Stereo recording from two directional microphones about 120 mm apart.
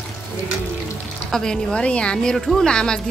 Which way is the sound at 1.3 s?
5° left (ahead or behind).